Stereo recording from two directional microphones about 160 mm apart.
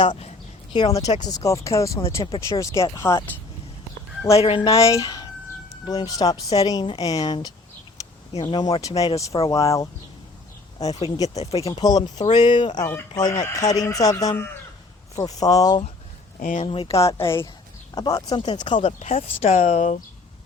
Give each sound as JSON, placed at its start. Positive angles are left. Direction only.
{"t": 0.0, "sound": "speech", "side_deg": 30}
{"t": 4.4, "sound": "speech", "side_deg": 35}
{"t": 4.7, "sound": "speech", "side_deg": 20}
{"t": 16.4, "sound": "speech", "side_deg": 55}
{"t": 16.6, "sound": "speech", "side_deg": 35}
{"t": 17.0, "sound": "speech", "side_deg": 15}
{"t": 18.9, "sound": "speech", "side_deg": 45}